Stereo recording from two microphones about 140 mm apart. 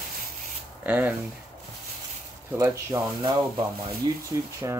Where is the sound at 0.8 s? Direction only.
15° right (ahead or behind).